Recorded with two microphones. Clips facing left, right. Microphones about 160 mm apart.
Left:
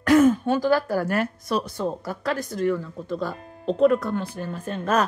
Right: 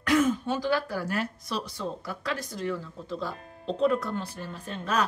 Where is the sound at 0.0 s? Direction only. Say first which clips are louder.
Left 7 dB; 50° left (ahead or behind).